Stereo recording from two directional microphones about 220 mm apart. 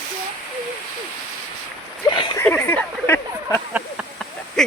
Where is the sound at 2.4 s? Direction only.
10° left (ahead or behind).